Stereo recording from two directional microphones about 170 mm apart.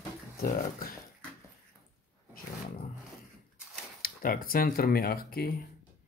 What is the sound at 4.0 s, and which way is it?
Speech, 55° left (ahead or behind).